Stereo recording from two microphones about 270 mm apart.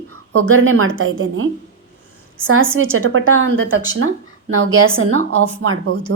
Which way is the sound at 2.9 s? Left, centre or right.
Right.